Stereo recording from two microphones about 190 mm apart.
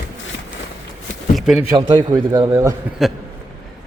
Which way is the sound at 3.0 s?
Centre (ahead or behind).